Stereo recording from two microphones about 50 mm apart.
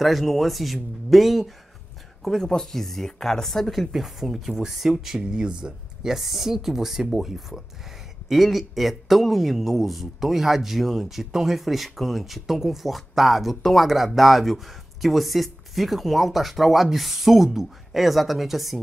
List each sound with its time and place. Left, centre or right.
0.0 s a man's voice: centre
2.2 s a man's voice: centre
5.2 s speech: centre
6.1 s a man's voice: centre